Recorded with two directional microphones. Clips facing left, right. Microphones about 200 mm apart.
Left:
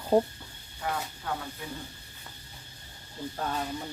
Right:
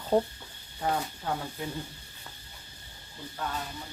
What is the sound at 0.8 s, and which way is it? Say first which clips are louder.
Speech: right 4 dB; 35° right (ahead or behind).